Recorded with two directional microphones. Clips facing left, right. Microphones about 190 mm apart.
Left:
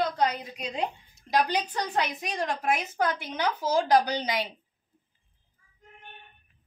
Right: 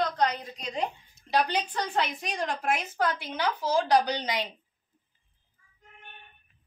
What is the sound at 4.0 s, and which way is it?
Speech, 10° left (ahead or behind).